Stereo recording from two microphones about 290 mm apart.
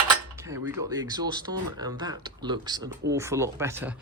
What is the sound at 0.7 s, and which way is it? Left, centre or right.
Speech, centre.